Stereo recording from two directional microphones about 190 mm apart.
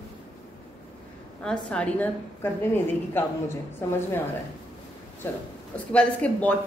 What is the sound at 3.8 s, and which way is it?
Speech, 15° left (ahead or behind).